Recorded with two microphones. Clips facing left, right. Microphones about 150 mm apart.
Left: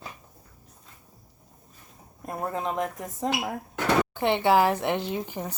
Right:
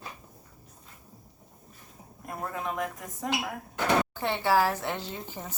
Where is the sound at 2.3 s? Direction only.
30° left (ahead or behind).